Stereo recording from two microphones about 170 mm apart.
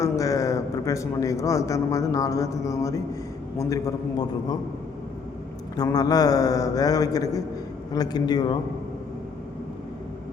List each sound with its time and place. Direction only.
0.0 s a man's voice: 20° left (ahead or behind)
5.7 s a man's voice: 20° left (ahead or behind)